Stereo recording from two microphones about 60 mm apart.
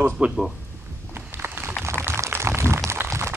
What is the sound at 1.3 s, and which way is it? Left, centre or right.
Run, right.